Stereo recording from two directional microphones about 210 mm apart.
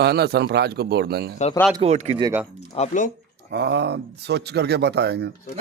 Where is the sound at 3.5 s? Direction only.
55° right (ahead or behind).